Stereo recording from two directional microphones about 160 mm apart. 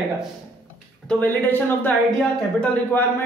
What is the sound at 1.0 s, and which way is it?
Speech, 10° left (ahead or behind).